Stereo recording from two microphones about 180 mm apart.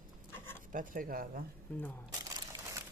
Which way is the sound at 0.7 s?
50° right (ahead or behind).